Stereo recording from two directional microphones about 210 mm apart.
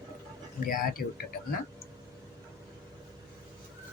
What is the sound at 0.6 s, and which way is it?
Speech, 45° left (ahead or behind).